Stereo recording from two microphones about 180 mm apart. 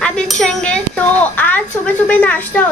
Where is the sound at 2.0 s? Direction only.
10° left (ahead or behind).